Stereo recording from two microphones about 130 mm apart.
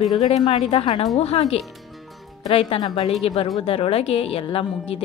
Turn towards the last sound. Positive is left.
turn(degrees=45)  # may be behind; listen again after turning